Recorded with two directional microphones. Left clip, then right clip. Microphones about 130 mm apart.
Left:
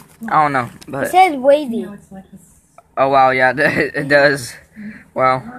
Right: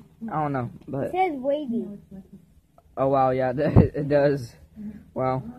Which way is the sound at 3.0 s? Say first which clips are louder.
Left 10 dB; 40° right (ahead or behind).